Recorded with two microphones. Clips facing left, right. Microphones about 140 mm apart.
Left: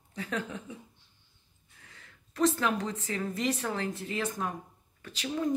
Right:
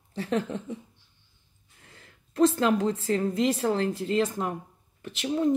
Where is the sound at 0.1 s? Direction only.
30° right (ahead or behind).